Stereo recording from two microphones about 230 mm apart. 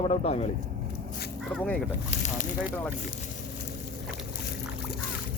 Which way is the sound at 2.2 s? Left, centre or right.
Left.